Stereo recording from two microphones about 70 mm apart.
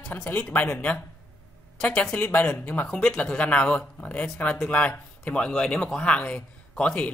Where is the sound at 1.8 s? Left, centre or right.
Centre.